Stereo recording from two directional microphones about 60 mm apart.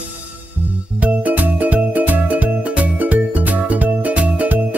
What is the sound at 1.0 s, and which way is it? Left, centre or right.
Music, right.